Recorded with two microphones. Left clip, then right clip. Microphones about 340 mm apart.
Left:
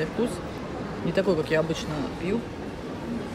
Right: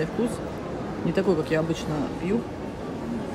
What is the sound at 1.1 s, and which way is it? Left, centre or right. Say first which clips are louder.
Speech: left 1 dB; centre.